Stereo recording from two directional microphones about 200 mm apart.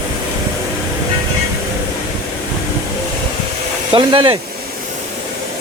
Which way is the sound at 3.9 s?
25° right (ahead or behind).